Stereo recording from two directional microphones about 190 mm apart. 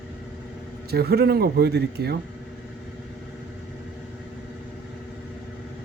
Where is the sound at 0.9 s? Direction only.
55° right (ahead or behind).